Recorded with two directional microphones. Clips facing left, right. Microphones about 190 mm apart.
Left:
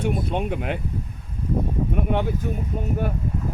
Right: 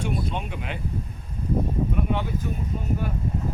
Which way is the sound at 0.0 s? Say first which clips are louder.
Left 4 dB; 55° left (ahead or behind).